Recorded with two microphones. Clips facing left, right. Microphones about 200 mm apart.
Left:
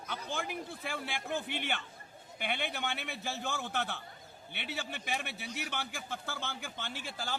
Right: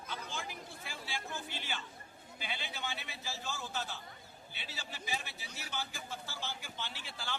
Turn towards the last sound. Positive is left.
turn(degrees=45)  # may be behind; listen again after turning